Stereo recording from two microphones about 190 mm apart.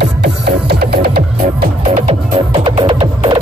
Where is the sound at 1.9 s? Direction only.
30° right (ahead or behind).